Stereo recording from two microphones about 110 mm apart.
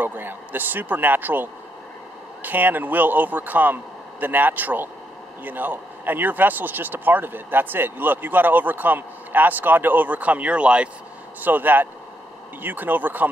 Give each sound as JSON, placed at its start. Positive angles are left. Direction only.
{"t": 0.0, "sound": "speech", "side_deg": -20}